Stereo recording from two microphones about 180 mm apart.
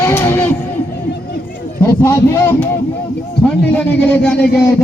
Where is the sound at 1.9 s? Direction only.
15° left (ahead or behind).